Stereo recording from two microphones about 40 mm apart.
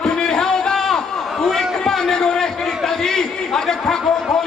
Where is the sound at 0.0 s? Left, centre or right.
Centre.